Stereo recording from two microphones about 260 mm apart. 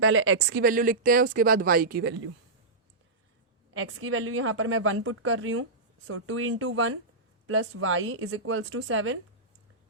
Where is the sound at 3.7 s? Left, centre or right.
Right.